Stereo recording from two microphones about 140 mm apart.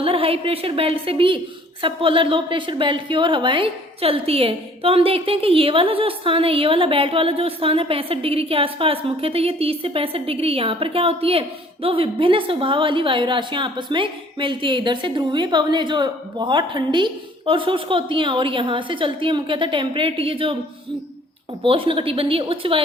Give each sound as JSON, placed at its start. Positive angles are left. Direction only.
{"t": 0.0, "sound": "a woman's voice", "side_deg": -40}
{"t": 21.6, "sound": "a woman's voice", "side_deg": -40}